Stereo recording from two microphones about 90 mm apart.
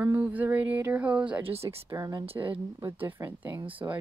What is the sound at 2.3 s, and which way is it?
Speech, 70° right (ahead or behind).